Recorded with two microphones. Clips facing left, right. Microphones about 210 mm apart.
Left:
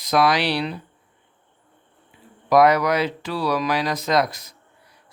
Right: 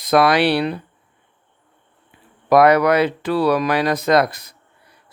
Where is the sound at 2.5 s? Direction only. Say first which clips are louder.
Right 4 dB; 60° right (ahead or behind).